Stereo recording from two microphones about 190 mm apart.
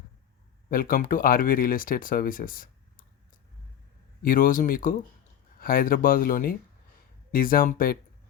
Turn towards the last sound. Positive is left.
turn(degrees=50)  # may be behind; listen again after turning